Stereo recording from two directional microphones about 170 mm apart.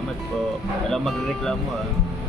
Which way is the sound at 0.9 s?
Centre (ahead or behind).